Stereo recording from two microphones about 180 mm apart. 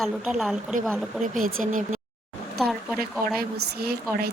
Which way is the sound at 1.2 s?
50° right (ahead or behind).